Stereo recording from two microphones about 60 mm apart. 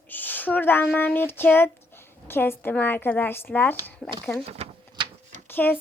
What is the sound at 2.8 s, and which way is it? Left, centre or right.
Speech, left.